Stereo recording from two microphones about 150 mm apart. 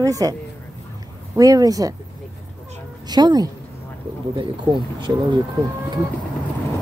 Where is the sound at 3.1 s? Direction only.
25° right (ahead or behind).